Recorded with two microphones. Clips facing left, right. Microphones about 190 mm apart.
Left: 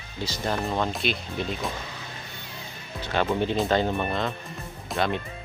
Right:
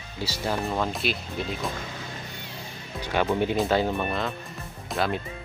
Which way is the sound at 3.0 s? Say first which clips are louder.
Right 1 dB; 10° right (ahead or behind).